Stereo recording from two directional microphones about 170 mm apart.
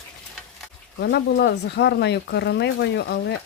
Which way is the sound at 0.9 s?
85° left.